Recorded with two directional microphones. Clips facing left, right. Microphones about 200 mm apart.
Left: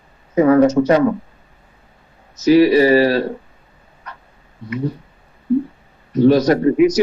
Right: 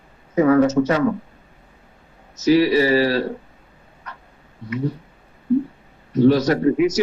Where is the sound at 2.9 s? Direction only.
50° left (ahead or behind).